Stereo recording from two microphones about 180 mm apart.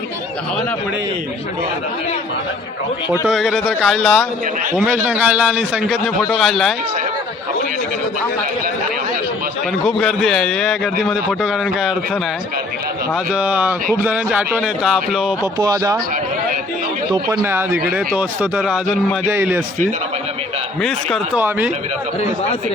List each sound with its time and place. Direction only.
3.1 s a man's voice: 5° right (ahead or behind)
4.7 s a man's voice: 10° right (ahead or behind)
9.8 s a man's voice: centre (ahead or behind)
13.3 s a man's voice: 10° right (ahead or behind)
15.5 s speech: 20° right (ahead or behind)
17.1 s speech: 25° right (ahead or behind)
17.4 s a man's voice: 10° right (ahead or behind)
21.3 s speech: 10° right (ahead or behind)